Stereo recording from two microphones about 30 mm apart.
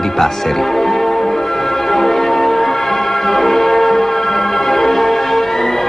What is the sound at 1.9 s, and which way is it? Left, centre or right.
Music, centre.